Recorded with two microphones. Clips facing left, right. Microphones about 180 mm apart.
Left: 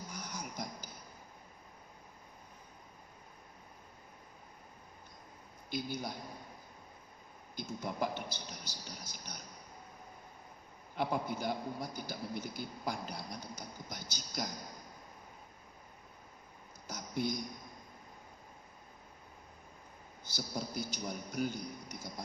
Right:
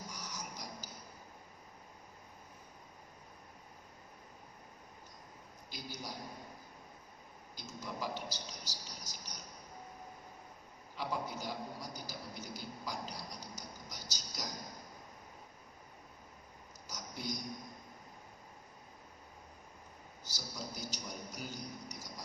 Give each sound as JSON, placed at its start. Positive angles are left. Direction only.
{"t": 0.1, "sound": "a sound", "side_deg": 55}
{"t": 5.7, "sound": "a man's voice", "side_deg": 55}
{"t": 7.5, "sound": "a man's voice", "side_deg": 55}
{"t": 10.9, "sound": "a man's voice", "side_deg": 55}
{"t": 16.8, "sound": "a sound", "side_deg": 55}
{"t": 20.2, "sound": "a man's voice", "side_deg": 55}